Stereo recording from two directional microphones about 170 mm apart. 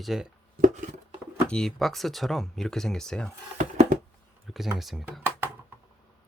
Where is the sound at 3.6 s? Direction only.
45° right (ahead or behind).